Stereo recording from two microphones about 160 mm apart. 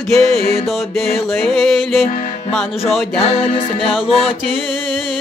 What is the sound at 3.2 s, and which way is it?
Music, 40° left (ahead or behind).